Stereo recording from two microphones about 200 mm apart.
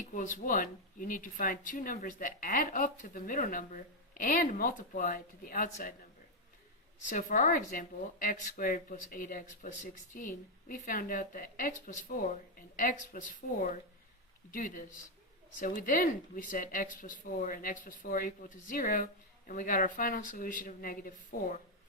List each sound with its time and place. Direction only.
0.1 s speech: 40° left (ahead or behind)
7.0 s a woman's voice: 40° left (ahead or behind)